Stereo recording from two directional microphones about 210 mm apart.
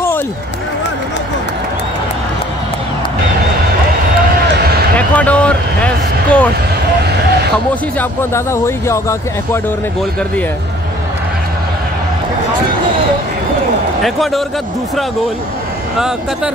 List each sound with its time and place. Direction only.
4.9 s a sound: 5° left (ahead or behind)
8.0 s speech: 10° left (ahead or behind)
14.0 s speech: centre (ahead or behind)